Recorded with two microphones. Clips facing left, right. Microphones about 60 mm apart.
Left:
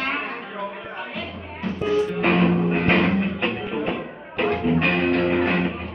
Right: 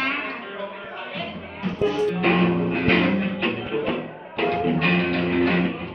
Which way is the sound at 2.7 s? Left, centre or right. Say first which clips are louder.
Left 1 dB; centre.